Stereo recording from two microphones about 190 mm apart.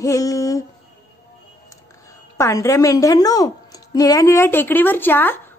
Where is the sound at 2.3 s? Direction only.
15° left (ahead or behind).